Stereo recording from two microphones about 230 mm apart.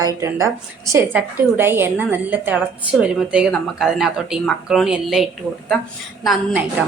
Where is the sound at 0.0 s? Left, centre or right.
Centre.